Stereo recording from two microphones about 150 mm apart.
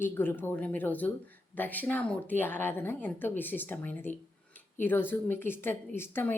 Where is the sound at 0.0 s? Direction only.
15° left (ahead or behind).